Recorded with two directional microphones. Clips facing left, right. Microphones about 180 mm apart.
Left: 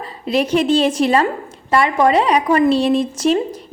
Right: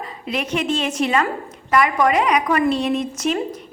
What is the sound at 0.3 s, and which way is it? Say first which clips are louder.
A woman's voice: left 7 dB; 35° left (ahead or behind).